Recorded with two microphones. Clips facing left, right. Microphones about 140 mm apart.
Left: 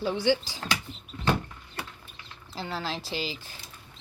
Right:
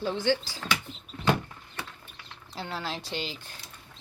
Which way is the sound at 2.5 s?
Centre (ahead or behind).